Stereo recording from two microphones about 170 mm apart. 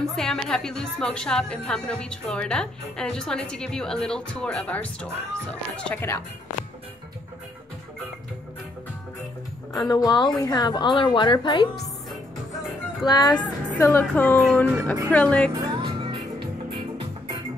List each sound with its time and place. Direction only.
0.0 s a woman's voice: 5° left (ahead or behind)
9.7 s a woman's voice: 20° left (ahead or behind)
13.0 s a woman's voice: 25° left (ahead or behind)
13.7 s speech: 15° left (ahead or behind)
15.6 s music: 30° right (ahead or behind)